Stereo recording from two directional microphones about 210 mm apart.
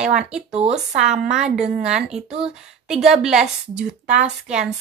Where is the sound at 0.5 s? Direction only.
30° right (ahead or behind).